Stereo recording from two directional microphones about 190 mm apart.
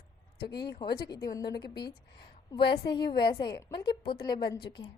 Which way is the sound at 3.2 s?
25° left (ahead or behind).